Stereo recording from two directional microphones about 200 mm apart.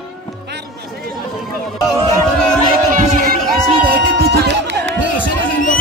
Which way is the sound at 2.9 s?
40° right (ahead or behind).